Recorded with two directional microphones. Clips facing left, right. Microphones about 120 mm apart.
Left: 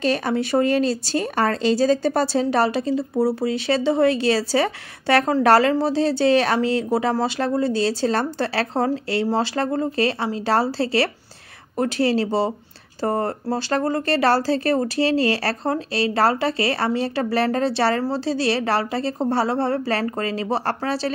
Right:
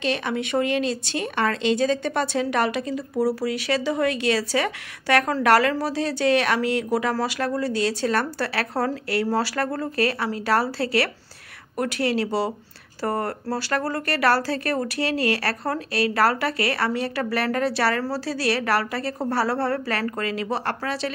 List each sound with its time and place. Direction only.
0.0 s speech: 40° left (ahead or behind)